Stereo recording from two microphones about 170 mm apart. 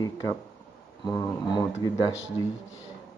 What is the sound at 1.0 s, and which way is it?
Speech, 25° left (ahead or behind).